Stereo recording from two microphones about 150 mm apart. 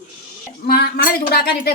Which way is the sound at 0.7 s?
90° left.